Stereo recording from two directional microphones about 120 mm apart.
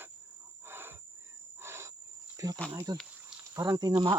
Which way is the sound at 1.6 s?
20° right (ahead or behind).